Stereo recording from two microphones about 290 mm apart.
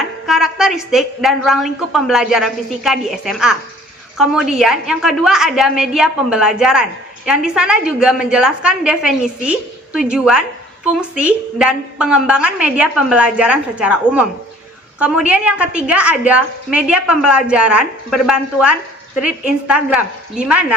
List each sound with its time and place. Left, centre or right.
0.0 s a woman's voice: centre